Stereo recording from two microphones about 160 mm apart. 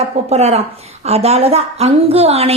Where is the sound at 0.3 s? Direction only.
40° right (ahead or behind).